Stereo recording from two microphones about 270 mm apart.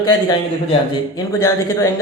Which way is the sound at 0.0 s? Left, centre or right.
Centre.